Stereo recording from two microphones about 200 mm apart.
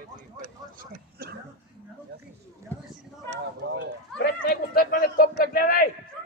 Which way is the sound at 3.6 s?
55° right (ahead or behind).